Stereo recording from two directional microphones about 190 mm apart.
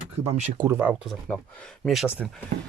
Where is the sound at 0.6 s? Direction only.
10° right (ahead or behind).